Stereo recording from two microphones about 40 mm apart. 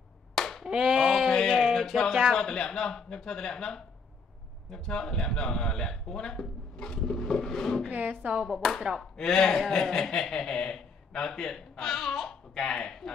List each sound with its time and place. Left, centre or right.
0.3 s clapping: centre
0.7 s a sound: centre
1.3 s a sound: centre
2.3 s speech: centre
7.9 s speech: right
8.5 s speech: centre